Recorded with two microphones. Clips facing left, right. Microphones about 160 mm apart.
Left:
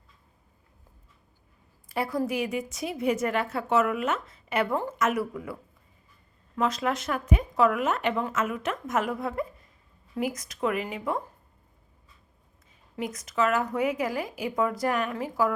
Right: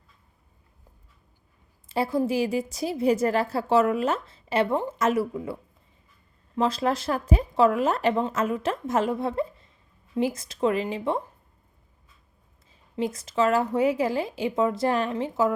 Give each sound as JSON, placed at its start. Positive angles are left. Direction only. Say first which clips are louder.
{"t": 1.9, "sound": "a woman's voice", "louder": "right 4 dB", "side_deg": -25}
{"t": 6.6, "sound": "a woman's voice", "louder": "right 3 dB", "side_deg": -30}
{"t": 13.0, "sound": "speech", "louder": "right 3 dB", "side_deg": -30}